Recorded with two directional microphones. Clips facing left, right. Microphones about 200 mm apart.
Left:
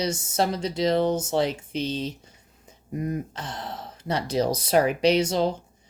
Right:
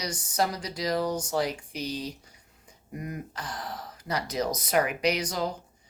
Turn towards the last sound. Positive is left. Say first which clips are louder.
# left 8 dB
turn(degrees=25)  # may be behind; listen again after turning